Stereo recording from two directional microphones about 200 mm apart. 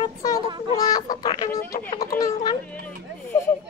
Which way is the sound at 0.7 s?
20° left (ahead or behind).